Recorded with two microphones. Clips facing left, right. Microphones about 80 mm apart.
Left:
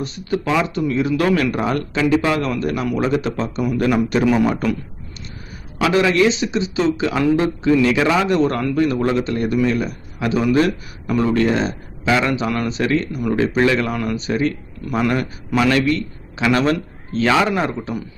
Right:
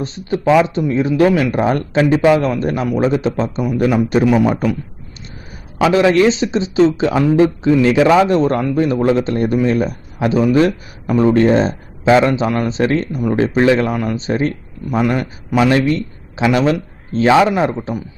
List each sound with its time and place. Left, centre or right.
0.0 s a man's voice: right
1.5 s a man's voice: right
5.8 s a man's voice: right
14.8 s a man's voice: centre